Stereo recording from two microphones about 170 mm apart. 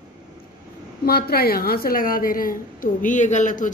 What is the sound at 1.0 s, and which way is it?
A woman's voice, 65° left (ahead or behind).